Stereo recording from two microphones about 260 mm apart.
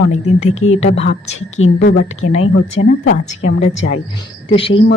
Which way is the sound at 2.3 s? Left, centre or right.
Left.